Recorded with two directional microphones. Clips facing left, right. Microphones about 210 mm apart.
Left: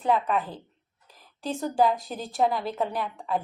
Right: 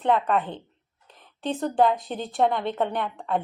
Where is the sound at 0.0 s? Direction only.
5° left (ahead or behind).